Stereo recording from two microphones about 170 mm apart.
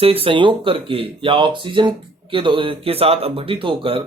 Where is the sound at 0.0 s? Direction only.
35° right (ahead or behind).